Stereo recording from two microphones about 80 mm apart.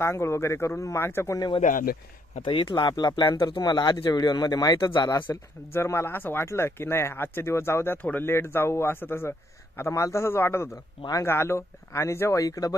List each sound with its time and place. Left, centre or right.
0.0 s speech: left
2.4 s speech: left
5.7 s speech: left